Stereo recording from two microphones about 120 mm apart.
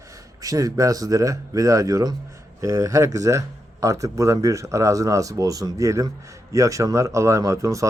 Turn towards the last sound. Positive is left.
turn(degrees=-25)  # may be behind; listen again after turning